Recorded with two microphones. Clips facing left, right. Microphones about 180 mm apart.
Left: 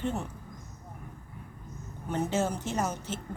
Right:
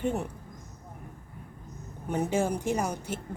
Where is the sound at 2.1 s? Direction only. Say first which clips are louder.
Right 2 dB; 10° right (ahead or behind).